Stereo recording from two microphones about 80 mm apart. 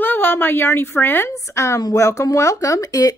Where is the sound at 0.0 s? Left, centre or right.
Left.